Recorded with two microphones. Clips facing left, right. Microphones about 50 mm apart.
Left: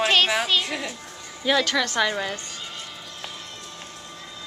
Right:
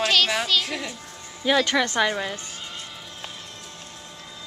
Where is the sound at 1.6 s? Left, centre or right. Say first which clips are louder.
Right 1 dB; right.